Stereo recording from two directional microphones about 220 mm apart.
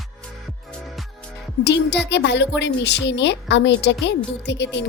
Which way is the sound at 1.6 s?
50° left (ahead or behind).